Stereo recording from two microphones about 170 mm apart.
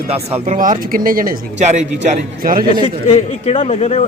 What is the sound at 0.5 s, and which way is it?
Speech, 50° right (ahead or behind).